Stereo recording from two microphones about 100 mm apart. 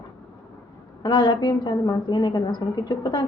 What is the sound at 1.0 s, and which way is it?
A woman's voice, 55° left (ahead or behind).